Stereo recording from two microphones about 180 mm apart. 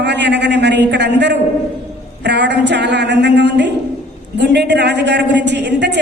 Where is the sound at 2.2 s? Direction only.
75° right (ahead or behind).